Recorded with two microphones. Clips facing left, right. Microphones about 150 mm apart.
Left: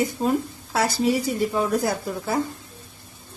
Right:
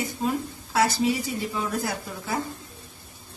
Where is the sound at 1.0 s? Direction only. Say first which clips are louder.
Left 3 dB; 40° left (ahead or behind).